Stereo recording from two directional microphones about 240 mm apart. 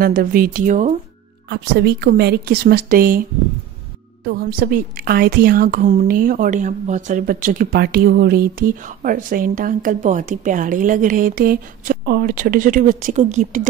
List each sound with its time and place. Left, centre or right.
0.0 s a woman's voice: right
1.5 s a woman's voice: right